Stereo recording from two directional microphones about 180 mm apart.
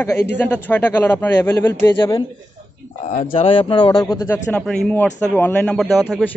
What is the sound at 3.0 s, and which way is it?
Speech, 40° left (ahead or behind).